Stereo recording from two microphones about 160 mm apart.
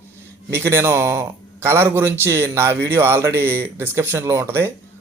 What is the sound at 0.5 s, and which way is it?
Speech, 15° right (ahead or behind).